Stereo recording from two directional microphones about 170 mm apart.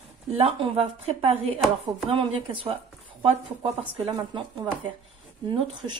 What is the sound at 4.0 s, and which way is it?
Speech, 30° right (ahead or behind).